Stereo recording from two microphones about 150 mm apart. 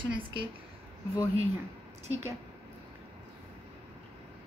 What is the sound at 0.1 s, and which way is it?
Speech, 35° right (ahead or behind).